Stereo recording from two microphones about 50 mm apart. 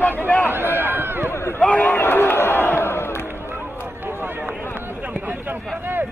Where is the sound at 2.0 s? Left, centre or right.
Left.